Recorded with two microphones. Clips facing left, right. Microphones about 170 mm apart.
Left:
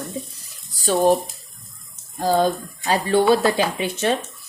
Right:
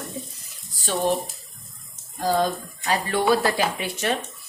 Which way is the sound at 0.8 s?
40° left (ahead or behind).